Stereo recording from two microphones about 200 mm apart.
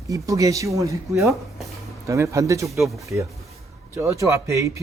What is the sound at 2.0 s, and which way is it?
Speech, 15° right (ahead or behind).